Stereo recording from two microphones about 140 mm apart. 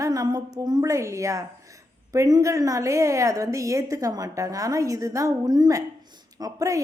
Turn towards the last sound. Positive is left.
turn(degrees=-25)  # may be behind; listen again after turning